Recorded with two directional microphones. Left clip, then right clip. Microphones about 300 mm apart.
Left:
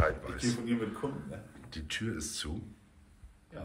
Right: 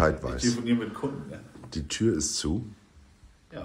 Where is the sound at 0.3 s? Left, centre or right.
Centre.